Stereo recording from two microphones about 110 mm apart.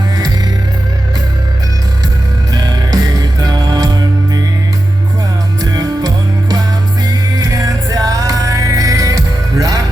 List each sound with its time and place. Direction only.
2.5 s music: 35° right (ahead or behind)
5.7 s music: 35° right (ahead or behind)